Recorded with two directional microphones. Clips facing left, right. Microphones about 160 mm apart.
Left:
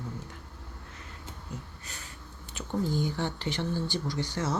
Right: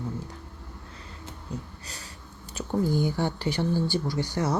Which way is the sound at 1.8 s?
35° right (ahead or behind).